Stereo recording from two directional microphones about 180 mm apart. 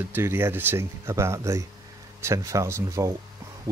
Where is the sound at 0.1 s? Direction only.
15° right (ahead or behind).